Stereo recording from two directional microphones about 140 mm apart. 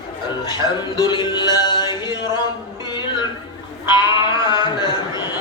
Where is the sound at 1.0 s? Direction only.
30° left (ahead or behind).